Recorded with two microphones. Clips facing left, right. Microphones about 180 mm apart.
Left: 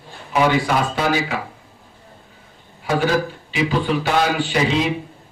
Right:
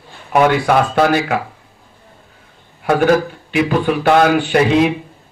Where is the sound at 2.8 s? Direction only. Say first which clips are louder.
Right 6 dB; 55° right (ahead or behind).